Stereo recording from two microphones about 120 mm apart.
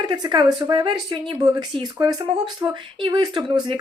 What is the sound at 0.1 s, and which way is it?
Speech, 35° right (ahead or behind).